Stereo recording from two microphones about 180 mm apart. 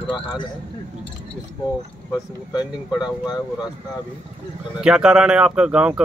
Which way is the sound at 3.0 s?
20° left (ahead or behind).